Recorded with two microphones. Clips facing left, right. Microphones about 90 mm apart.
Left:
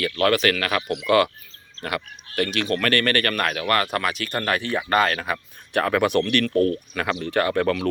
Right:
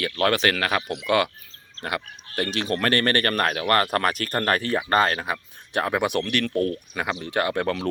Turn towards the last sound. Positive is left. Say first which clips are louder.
# left 3 dB
turn(degrees=-25)  # may be behind; listen again after turning